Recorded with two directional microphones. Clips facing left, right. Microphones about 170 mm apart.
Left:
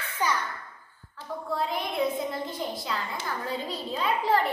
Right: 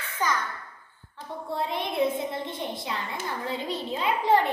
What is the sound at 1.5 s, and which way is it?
A woman's voice, 25° right (ahead or behind).